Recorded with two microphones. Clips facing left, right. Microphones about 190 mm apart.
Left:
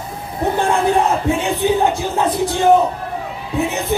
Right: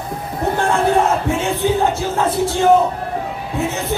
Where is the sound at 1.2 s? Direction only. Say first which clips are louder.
Left 1 dB; 15° left (ahead or behind).